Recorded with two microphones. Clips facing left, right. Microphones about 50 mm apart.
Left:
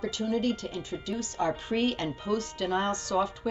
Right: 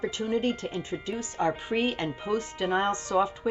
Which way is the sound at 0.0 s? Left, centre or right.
Right.